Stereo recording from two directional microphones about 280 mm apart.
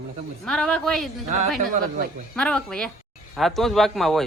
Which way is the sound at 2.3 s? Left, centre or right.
Centre.